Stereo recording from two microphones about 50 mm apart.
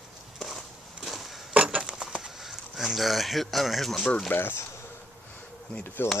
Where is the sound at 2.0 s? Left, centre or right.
Centre.